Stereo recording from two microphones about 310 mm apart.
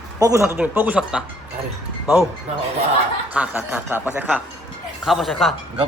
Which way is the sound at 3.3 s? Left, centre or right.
Centre.